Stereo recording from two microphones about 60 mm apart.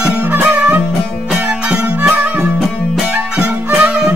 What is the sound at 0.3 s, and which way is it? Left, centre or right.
Music, right.